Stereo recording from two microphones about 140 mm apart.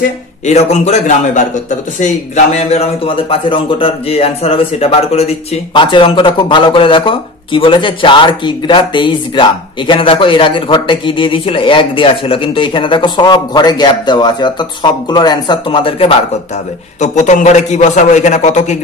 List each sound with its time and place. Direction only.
0.5 s a man's voice: 50° left (ahead or behind)
5.7 s speech: 35° left (ahead or behind)
17.0 s a man's voice: 55° left (ahead or behind)